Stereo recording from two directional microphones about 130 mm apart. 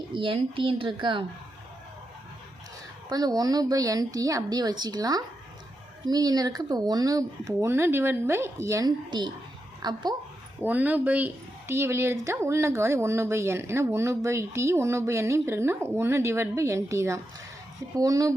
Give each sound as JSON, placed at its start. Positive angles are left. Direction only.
{"t": 0.1, "sound": "speech", "side_deg": -40}
{"t": 3.1, "sound": "speech", "side_deg": -30}
{"t": 9.0, "sound": "speech", "side_deg": -35}
{"t": 10.6, "sound": "speech", "side_deg": -15}